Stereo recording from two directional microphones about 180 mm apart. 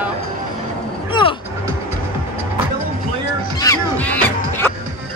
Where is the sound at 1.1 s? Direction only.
30° left (ahead or behind).